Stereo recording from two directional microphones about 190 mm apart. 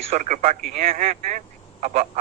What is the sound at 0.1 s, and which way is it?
A man's voice, 35° right (ahead or behind).